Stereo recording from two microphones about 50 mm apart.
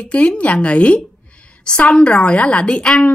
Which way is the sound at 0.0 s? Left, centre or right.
Left.